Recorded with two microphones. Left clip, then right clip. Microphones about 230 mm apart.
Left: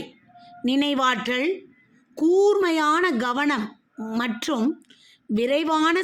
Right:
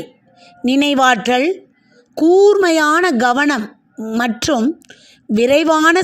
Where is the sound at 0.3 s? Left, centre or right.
Right.